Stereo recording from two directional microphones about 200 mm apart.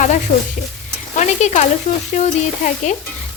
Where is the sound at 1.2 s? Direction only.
35° left (ahead or behind).